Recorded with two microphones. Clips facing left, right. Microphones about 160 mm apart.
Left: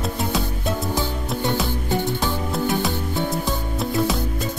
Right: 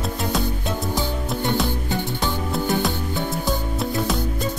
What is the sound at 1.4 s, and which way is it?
Music, centre (ahead or behind).